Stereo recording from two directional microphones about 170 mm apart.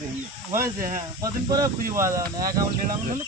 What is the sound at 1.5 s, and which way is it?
Speech, 20° right (ahead or behind).